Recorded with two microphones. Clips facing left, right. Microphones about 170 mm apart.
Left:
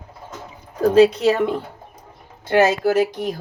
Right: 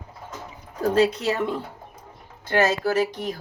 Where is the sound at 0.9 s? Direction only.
75° left (ahead or behind).